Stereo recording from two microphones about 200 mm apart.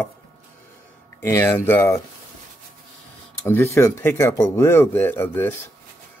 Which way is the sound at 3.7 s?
15° left (ahead or behind).